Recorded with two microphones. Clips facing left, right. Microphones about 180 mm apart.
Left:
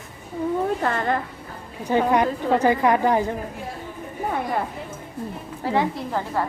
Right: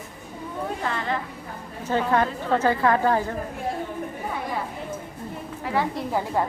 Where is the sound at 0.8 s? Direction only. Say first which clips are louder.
Left 4 dB; 50° left (ahead or behind).